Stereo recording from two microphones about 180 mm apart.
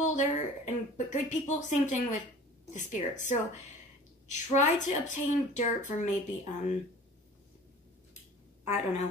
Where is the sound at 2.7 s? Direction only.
40° left (ahead or behind).